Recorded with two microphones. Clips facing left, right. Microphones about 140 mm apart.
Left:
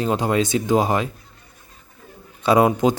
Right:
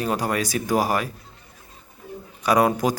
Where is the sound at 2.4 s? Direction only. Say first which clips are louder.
Left 3 dB; 25° left (ahead or behind).